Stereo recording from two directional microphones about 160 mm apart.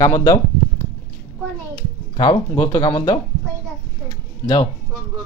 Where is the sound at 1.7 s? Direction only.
25° left (ahead or behind).